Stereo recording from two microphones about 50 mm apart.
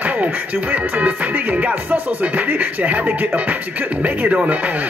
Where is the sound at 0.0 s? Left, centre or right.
Right.